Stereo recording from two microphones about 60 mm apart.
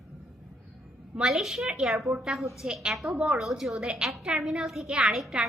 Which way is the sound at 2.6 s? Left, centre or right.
Centre.